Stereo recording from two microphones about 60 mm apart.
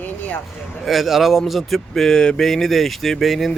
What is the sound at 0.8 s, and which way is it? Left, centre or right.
Speech, centre.